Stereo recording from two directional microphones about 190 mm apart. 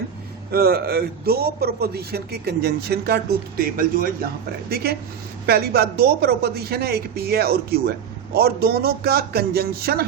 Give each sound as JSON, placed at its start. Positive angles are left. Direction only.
{"t": 0.5, "sound": "a woman's voice", "side_deg": -55}